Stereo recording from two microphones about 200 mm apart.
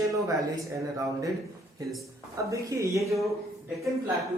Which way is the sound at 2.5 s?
15° right (ahead or behind).